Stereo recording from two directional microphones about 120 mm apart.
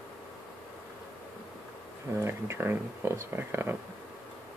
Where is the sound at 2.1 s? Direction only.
20° right (ahead or behind).